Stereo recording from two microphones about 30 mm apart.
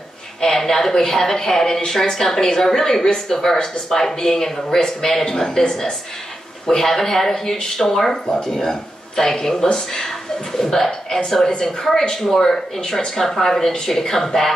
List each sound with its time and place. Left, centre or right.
0.4 s speech: centre
11.9 s speech: left